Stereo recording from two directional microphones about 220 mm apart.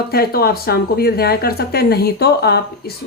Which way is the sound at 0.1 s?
45° left (ahead or behind).